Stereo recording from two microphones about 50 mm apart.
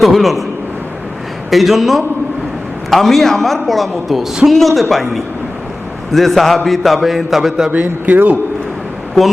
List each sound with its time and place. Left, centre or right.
0.0 s a man's voice: centre
1.5 s a man's voice: centre
7.7 s speech: right